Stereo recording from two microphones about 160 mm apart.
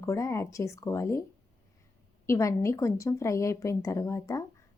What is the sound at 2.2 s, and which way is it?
A woman's voice, 20° left (ahead or behind).